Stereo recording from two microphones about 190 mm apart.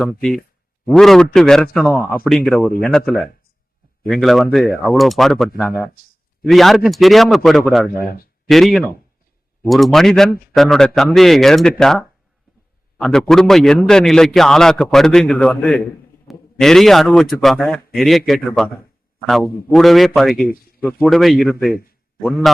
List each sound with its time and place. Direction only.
0.0 s a man's voice: centre (ahead or behind)
4.1 s a man's voice: centre (ahead or behind)
8.0 s speech: 50° left (ahead or behind)
8.4 s a man's voice: centre (ahead or behind)
19.7 s a man's voice: centre (ahead or behind)
20.3 s speech: 50° left (ahead or behind)
20.8 s a man's voice: centre (ahead or behind)